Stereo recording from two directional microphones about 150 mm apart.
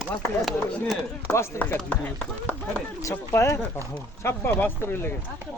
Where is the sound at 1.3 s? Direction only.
15° left (ahead or behind).